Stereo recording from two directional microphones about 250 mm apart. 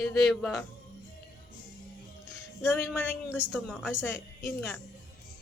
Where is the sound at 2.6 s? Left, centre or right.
Centre.